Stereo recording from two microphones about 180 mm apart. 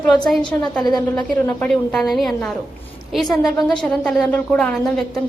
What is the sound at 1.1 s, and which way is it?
A woman's voice, 10° left (ahead or behind).